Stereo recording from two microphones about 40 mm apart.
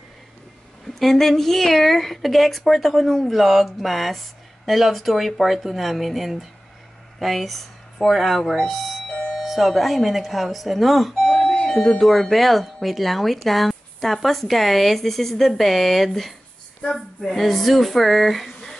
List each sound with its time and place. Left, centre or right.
0.9 s speech: centre
11.4 s doorbell: centre
12.0 s speech: centre